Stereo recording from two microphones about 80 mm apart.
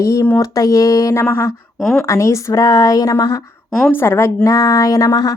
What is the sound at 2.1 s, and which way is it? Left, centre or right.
Speech, left.